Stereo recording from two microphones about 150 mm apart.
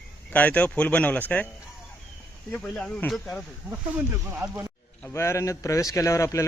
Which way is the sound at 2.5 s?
5° left (ahead or behind).